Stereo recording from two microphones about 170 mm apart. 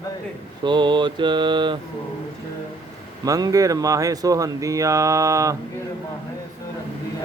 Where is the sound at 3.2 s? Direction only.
20° right (ahead or behind).